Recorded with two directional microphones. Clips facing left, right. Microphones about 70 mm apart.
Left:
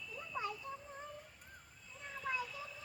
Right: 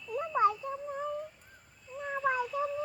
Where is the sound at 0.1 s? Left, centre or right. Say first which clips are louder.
Right 16 dB; right.